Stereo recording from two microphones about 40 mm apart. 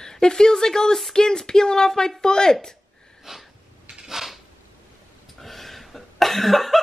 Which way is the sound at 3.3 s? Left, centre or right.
Centre.